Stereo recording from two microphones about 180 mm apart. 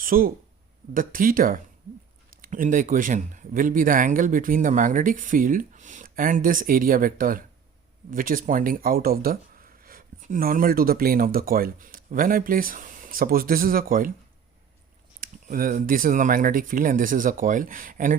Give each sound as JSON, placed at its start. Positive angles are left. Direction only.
{"t": 0.0, "sound": "speech", "side_deg": -50}
{"t": 15.2, "sound": "speech", "side_deg": -50}